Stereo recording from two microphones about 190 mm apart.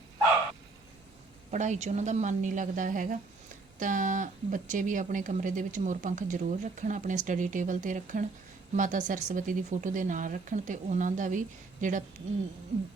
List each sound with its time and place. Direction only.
1.5 s a woman's voice: 40° right (ahead or behind)